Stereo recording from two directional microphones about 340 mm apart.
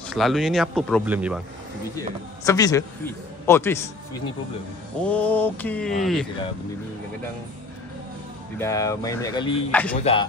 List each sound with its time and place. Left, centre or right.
0.1 s speech: centre
2.4 s speech: centre
5.0 s speech: centre
8.5 s speech: centre
9.9 s speech: centre